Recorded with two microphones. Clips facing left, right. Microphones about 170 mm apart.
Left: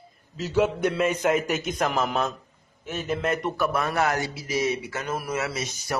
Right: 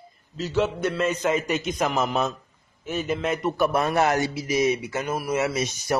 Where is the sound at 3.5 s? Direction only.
25° right (ahead or behind).